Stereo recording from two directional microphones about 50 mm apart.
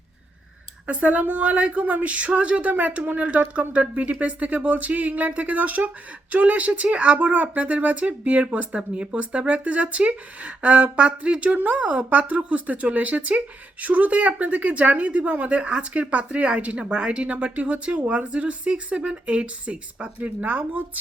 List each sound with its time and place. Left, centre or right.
0.9 s a woman's voice: right